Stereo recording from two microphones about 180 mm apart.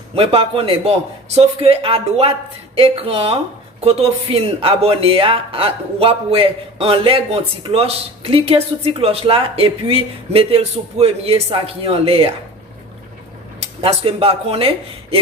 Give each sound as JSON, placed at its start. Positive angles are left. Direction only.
{"t": 0.1, "sound": "speech", "side_deg": -30}
{"t": 13.8, "sound": "speech", "side_deg": -30}